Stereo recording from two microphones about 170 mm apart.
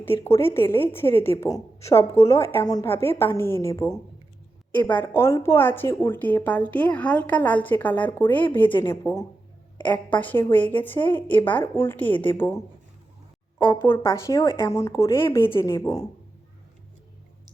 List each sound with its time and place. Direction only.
0.0 s a woman's voice: 15° left (ahead or behind)
14.0 s a woman's voice: 15° left (ahead or behind)
15.4 s a woman's voice: 30° left (ahead or behind)